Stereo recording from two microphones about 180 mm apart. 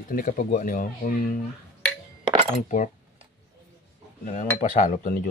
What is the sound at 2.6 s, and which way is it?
Cutlery, 45° left (ahead or behind).